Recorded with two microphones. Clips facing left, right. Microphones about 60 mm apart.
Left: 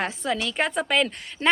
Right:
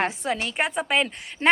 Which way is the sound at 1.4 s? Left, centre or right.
Right.